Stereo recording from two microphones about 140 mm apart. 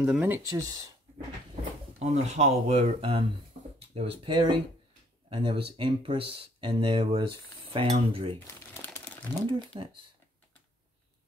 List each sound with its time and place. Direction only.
0.0 s speech: 10° right (ahead or behind)
0.5 s speech: 25° right (ahead or behind)
2.0 s speech: 55° right (ahead or behind); by 8.4 s 35° right (ahead or behind)
8.4 s crumpling: 15° left (ahead or behind)